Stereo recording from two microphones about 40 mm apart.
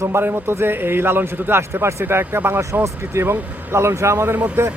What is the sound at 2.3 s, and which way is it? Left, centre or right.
Speech, right.